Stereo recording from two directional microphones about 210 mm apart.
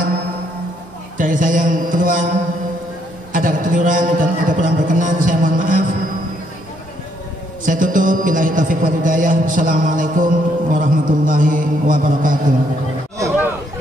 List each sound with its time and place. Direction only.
1.1 s music: 40° right (ahead or behind)
3.3 s music: 40° right (ahead or behind)
7.6 s music: 40° right (ahead or behind)